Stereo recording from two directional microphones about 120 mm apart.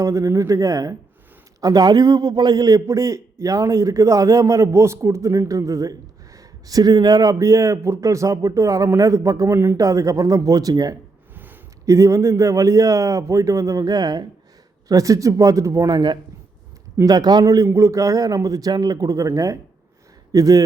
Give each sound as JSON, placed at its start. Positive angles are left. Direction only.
{"t": 0.0, "sound": "a man's voice", "side_deg": -25}